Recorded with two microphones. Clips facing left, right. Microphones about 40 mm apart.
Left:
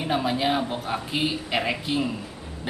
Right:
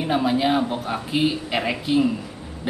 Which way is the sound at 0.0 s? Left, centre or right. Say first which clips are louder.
Right 4 dB; centre.